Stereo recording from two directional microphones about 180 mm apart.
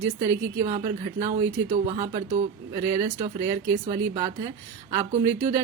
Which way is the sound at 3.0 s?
45° right (ahead or behind).